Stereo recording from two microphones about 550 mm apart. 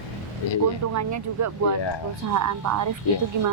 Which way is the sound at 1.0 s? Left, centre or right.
Right.